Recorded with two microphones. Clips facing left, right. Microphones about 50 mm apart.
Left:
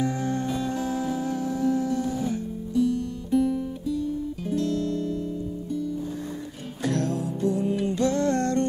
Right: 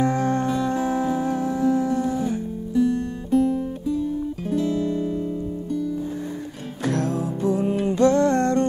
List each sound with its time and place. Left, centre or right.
0.0 s music: right
2.9 s music: right
4.6 s guitar: centre
6.8 s music: right